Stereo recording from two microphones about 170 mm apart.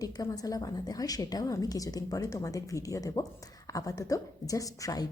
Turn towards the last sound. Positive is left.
turn(degrees=20)  # may be behind; listen again after turning